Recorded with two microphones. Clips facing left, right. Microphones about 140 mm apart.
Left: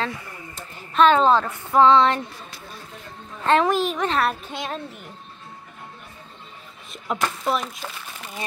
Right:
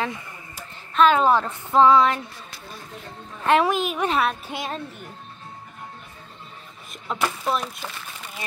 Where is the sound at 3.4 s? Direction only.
15° right (ahead or behind).